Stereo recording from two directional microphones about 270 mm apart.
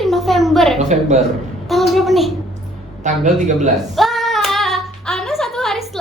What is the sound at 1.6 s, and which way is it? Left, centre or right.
Speech, centre.